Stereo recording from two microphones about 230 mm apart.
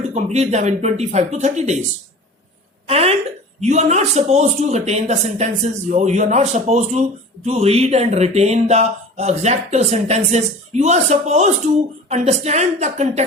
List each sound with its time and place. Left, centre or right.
0.1 s speech: right
2.8 s speech: right